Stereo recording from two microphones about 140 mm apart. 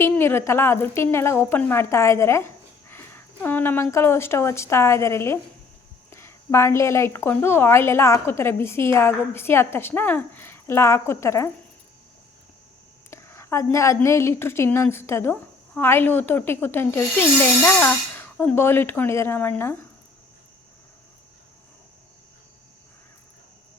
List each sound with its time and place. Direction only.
0.0 s a woman's voice: 15° left (ahead or behind)
13.1 s a woman's voice: 20° left (ahead or behind)